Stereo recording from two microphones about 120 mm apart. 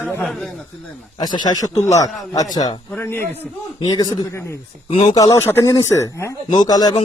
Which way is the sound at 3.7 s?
35° left (ahead or behind).